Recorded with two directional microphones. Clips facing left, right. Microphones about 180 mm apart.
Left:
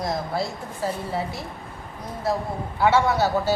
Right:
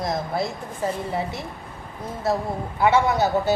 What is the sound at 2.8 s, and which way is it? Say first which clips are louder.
Speech: right 1 dB; 15° right (ahead or behind).